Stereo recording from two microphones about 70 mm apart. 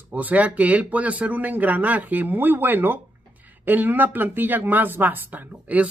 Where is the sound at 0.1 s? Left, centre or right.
Right.